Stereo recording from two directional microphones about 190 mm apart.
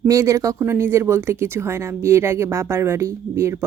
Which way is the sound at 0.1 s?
15° right (ahead or behind).